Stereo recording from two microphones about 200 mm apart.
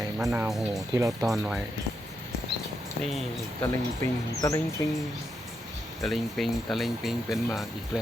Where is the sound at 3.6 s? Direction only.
15° left (ahead or behind).